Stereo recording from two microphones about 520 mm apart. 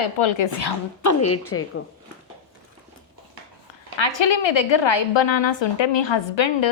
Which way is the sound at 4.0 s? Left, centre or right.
Left.